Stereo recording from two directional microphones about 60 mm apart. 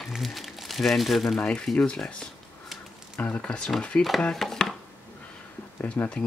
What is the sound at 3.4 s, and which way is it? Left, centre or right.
Speech, centre.